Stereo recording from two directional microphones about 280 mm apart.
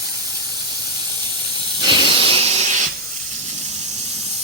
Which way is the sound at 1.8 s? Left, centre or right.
Centre.